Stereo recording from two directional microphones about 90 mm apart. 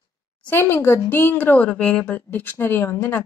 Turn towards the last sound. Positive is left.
turn(degrees=30)  # may be behind; listen again after turning